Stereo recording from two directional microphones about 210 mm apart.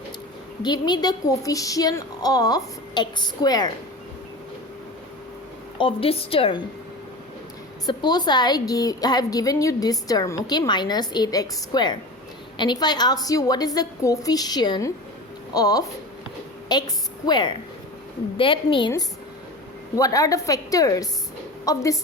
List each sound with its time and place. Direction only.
0.6 s a woman's voice: 20° left (ahead or behind)
5.7 s a woman's voice: 25° left (ahead or behind)
7.9 s a woman's voice: 20° left (ahead or behind)
20.0 s a woman's voice: 15° left (ahead or behind)